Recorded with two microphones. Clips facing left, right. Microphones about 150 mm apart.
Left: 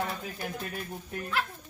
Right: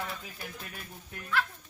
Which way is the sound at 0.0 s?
45° left (ahead or behind).